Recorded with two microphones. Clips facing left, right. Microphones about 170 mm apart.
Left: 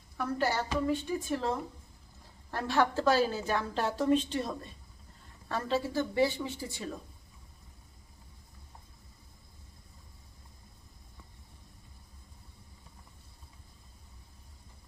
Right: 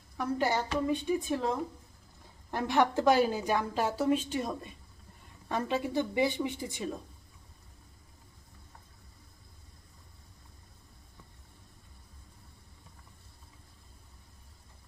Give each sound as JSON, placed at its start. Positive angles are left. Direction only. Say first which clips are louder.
{"t": 0.2, "sound": "a woman's voice", "louder": "right 1 dB", "side_deg": -15}
{"t": 2.5, "sound": "a woman's voice", "louder": "right 1 dB", "side_deg": -15}